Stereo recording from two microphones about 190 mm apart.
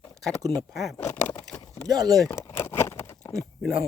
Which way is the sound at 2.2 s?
15° left (ahead or behind).